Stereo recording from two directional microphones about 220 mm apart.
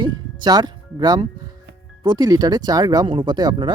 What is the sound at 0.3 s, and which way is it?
Speech, 20° right (ahead or behind).